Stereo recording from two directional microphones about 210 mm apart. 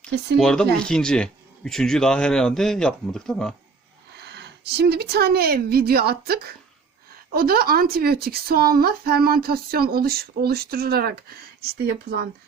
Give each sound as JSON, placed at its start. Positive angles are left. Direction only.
{"t": 0.3, "sound": "speech", "side_deg": 5}
{"t": 4.2, "sound": "a woman's voice", "side_deg": -50}